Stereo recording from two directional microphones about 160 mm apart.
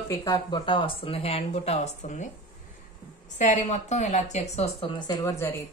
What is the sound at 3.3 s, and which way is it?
Speech, 45° left (ahead or behind).